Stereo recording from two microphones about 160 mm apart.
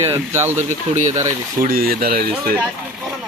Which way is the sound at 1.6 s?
65° right (ahead or behind).